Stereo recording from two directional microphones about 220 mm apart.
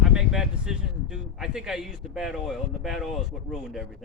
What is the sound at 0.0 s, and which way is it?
Speech, centre (ahead or behind).